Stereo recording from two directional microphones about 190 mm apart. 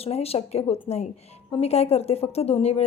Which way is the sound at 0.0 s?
30° left (ahead or behind).